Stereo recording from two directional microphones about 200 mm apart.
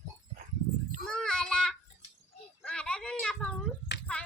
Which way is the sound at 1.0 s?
5° left (ahead or behind).